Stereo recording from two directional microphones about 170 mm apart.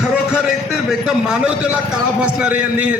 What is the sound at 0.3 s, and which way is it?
A man's voice, 5° right (ahead or behind).